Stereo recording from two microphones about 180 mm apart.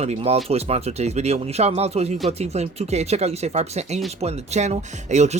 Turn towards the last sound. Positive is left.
turn(degrees=-40)  # may be behind; listen again after turning